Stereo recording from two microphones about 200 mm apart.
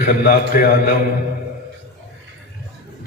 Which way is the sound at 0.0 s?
45° left (ahead or behind).